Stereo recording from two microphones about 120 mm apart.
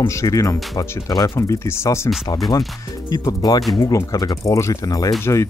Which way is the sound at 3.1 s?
35° left (ahead or behind).